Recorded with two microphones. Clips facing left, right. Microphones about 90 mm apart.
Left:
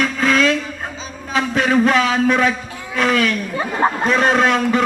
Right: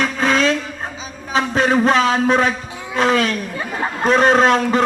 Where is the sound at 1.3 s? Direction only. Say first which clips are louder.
Even; 30° right (ahead or behind).